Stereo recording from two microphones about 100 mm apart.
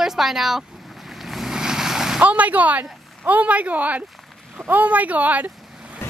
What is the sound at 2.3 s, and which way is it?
Speech, 15° right (ahead or behind).